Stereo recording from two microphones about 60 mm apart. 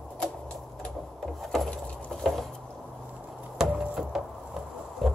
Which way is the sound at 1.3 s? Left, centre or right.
Centre.